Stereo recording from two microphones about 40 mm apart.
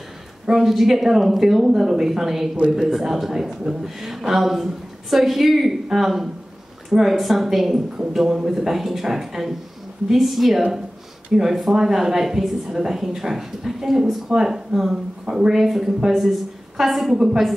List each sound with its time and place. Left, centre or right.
0.5 s a woman's voice: centre